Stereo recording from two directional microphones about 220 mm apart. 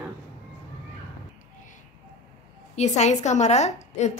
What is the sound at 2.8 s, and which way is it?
A woman's voice, 30° left (ahead or behind).